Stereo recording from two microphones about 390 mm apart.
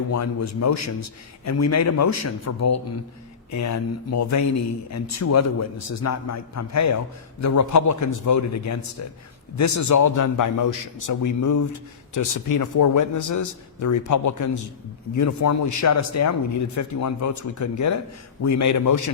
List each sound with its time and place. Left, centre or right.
0.1 s a man's voice: left